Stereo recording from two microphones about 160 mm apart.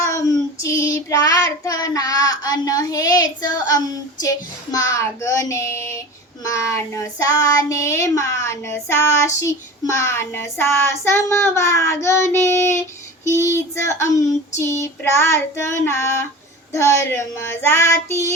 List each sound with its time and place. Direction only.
0.0 s child singing: 20° left (ahead or behind)